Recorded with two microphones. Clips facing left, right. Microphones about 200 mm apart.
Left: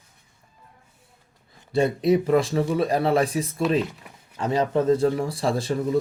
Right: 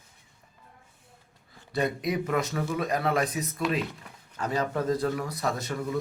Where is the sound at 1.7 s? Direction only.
30° left (ahead or behind).